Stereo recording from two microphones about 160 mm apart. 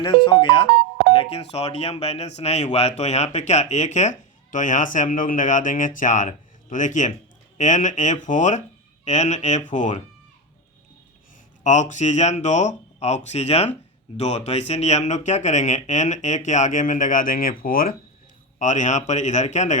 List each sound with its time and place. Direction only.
0.3 s speech: 30° left (ahead or behind); by 10.0 s 50° left (ahead or behind)
11.6 s speech: 50° left (ahead or behind)
18.6 s speech: 50° left (ahead or behind)